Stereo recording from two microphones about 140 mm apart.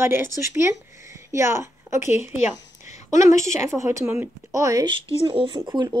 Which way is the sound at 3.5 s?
20° right (ahead or behind).